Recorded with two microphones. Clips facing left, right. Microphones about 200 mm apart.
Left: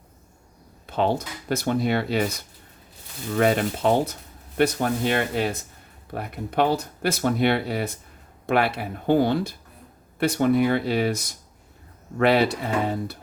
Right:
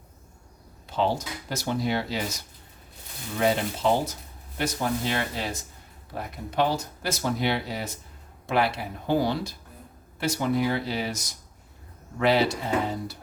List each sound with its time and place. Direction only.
0.9 s speech: 55° left (ahead or behind)
3.3 s speech: 55° left (ahead or behind)